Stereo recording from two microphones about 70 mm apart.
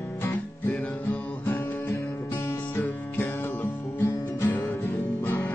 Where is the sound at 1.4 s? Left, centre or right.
Left.